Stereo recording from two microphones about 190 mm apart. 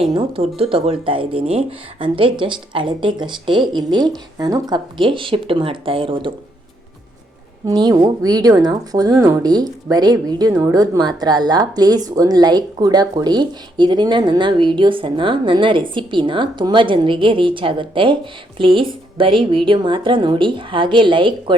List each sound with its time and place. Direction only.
0.1 s speech: 30° right (ahead or behind)
7.7 s speech: 20° right (ahead or behind)